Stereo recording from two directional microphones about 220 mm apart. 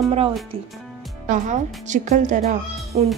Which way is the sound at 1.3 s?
35° right (ahead or behind).